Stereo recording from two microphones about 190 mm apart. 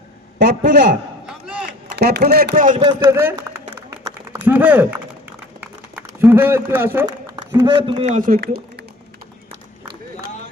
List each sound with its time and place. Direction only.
0.3 s a man's voice: 65° right (ahead or behind)
1.3 s a sound: 5° right (ahead or behind)
2.0 s speech: 60° right (ahead or behind)
3.0 s a man's voice: 15° right (ahead or behind)
3.8 s a sound: 20° right (ahead or behind)
4.4 s a man's voice: 10° right (ahead or behind)
6.1 s a man's voice: 10° right (ahead or behind)
7.3 s a man's voice: 25° right (ahead or behind)
8.1 s speech: 45° right (ahead or behind)